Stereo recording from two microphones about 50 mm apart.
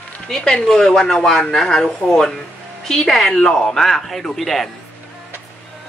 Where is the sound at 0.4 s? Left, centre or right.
Left; by 4.6 s centre.